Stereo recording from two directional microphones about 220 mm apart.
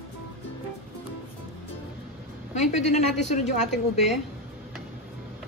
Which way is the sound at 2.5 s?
30° left (ahead or behind).